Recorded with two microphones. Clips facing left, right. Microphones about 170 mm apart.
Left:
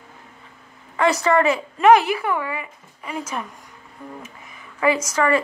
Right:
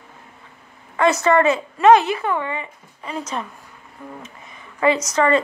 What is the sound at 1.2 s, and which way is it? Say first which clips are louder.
Speech: right 2 dB; 20° right (ahead or behind).